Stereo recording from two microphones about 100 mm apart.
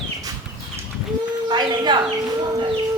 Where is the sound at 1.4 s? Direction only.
50° right (ahead or behind).